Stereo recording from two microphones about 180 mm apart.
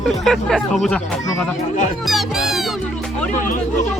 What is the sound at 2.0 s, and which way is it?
Music, centre (ahead or behind).